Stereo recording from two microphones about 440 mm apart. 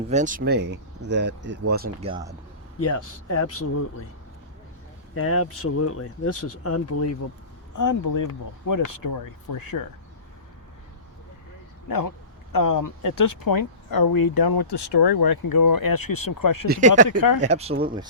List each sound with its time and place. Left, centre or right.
0.1 s speech: centre
2.8 s speech: left
5.1 s speech: left
11.9 s speech: left
16.6 s speech: centre